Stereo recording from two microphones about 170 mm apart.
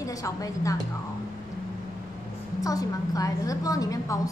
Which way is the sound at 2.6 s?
20° left (ahead or behind).